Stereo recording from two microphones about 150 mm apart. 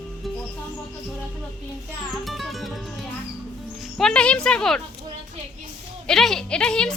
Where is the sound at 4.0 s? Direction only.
5° left (ahead or behind).